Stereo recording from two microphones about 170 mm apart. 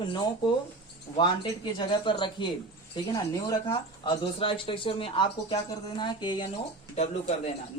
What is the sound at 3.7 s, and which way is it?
Speech, 30° left (ahead or behind).